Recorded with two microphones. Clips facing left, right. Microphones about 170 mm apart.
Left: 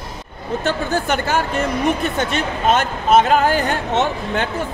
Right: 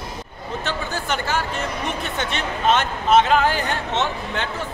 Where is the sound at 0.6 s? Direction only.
50° left (ahead or behind).